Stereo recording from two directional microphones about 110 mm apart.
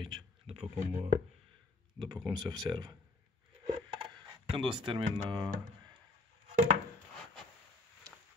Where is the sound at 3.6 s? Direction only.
50° right (ahead or behind).